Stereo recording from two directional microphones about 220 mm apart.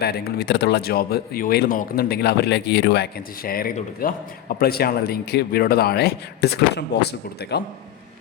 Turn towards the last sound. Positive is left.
turn(degrees=50)  # may be behind; listen again after turning